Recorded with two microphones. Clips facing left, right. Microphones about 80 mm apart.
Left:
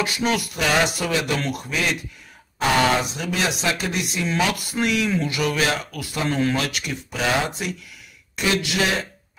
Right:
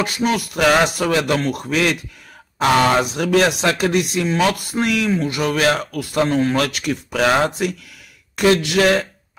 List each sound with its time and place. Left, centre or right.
0.0 s music: right
0.6 s speech: right
3.0 s speech: right